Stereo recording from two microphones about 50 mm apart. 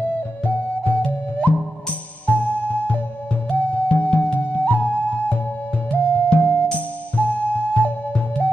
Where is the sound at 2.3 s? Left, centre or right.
Left.